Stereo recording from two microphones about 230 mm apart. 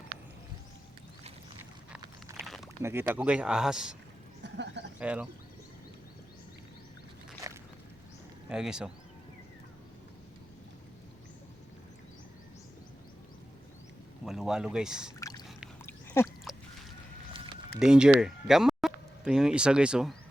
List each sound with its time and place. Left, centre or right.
2.4 s a sound: centre
2.8 s speech: centre
4.4 s speech: right
4.9 s speech: centre
8.4 s speech: centre
14.3 s speech: centre
15.2 s a sound: centre
17.7 s speech: centre